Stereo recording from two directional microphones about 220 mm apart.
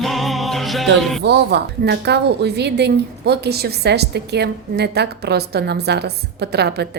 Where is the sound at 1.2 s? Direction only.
50° right (ahead or behind).